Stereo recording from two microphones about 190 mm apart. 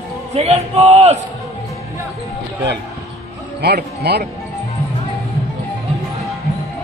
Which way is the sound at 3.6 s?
60° right (ahead or behind).